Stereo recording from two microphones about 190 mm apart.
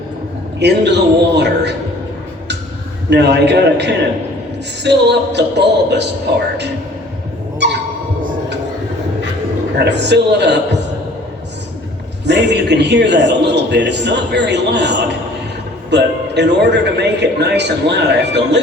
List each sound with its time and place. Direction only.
0.6 s a man's voice: 65° right (ahead or behind)
3.1 s a man's voice: 65° right (ahead or behind)
7.6 s a sound: 65° right (ahead or behind)
9.7 s a man's voice: 65° right (ahead or behind)
12.2 s a man's voice: 65° right (ahead or behind)